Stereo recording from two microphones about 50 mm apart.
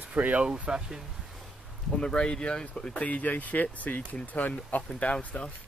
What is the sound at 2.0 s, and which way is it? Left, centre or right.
Speech, centre.